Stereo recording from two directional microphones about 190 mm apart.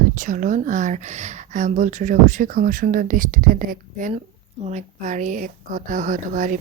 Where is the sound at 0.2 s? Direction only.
40° right (ahead or behind).